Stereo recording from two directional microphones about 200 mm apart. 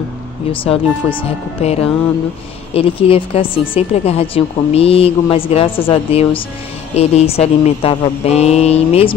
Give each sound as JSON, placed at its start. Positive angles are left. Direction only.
{"t": 0.5, "sound": "speech", "side_deg": 25}